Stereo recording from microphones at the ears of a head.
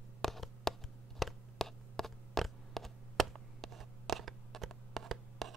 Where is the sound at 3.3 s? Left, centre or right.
Right.